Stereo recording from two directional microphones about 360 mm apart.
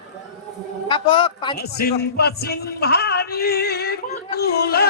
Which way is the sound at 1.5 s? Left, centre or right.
Left.